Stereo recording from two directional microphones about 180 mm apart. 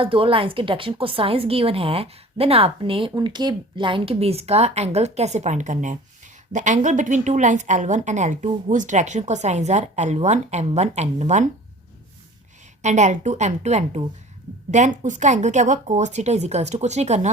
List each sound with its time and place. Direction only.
0.0 s a woman's voice: 30° right (ahead or behind)
12.8 s a woman's voice: 40° right (ahead or behind)